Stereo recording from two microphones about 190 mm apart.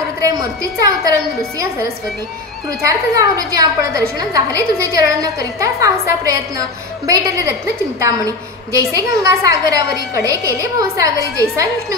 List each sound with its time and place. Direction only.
0.2 s a woman's voice: 20° right (ahead or behind)
2.9 s a woman's voice: 15° right (ahead or behind)
8.9 s a woman's voice: 15° right (ahead or behind)